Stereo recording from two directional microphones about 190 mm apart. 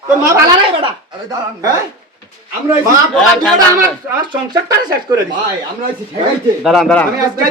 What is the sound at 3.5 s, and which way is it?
Speech, 15° right (ahead or behind).